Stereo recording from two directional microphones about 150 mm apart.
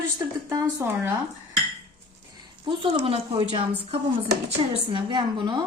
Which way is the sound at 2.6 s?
40° right (ahead or behind).